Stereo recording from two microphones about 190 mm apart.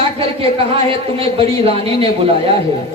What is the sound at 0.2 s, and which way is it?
Speech, 30° right (ahead or behind).